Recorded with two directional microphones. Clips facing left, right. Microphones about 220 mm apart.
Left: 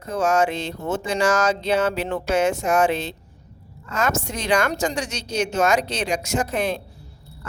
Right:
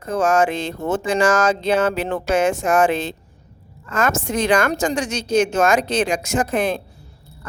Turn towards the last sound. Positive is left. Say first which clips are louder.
# right 3 dB
turn(degrees=-50)  # may be behind; listen again after turning